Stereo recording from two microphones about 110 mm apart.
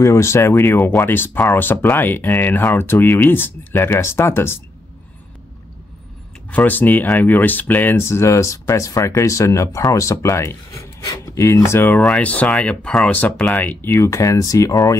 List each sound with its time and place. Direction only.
0.0 s speech: 25° left (ahead or behind)
6.5 s speech: 15° left (ahead or behind)